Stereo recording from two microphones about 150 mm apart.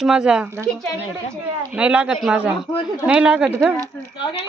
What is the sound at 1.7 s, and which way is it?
Speech, 10° right (ahead or behind).